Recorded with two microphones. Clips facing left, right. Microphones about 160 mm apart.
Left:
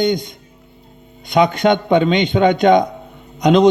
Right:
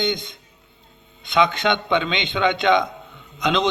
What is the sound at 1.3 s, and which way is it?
A man's voice, 40° left (ahead or behind).